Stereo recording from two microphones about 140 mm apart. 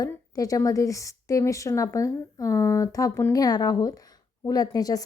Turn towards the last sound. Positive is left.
turn(degrees=25)  # may be behind; listen again after turning